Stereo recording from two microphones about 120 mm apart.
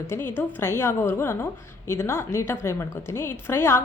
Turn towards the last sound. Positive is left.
turn(degrees=20)  # may be behind; listen again after turning